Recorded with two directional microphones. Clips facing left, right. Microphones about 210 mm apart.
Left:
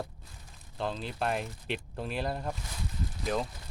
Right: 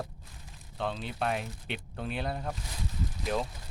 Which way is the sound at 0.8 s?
Centre (ahead or behind).